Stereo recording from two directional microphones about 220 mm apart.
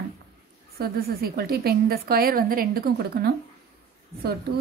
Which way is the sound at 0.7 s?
45° right (ahead or behind).